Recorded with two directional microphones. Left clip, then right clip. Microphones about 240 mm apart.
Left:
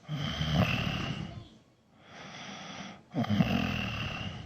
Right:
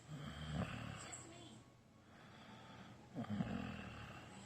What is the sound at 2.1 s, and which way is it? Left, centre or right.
Snoring, left.